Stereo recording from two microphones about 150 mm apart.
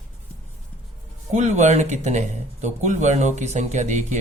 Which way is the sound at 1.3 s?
50° right (ahead or behind).